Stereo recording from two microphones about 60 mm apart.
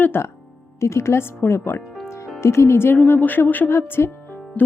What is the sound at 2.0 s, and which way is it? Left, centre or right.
Music, left.